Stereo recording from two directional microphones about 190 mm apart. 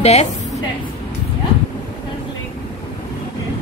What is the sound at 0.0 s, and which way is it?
Speech, 35° left (ahead or behind).